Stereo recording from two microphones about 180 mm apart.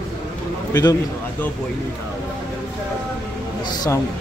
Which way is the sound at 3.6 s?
20° left (ahead or behind).